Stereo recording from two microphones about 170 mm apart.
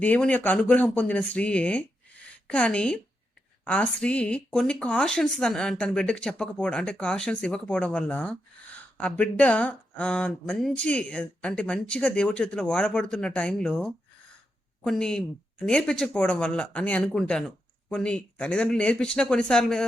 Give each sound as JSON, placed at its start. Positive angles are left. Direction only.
{"t": 0.0, "sound": "a woman's voice", "side_deg": 10}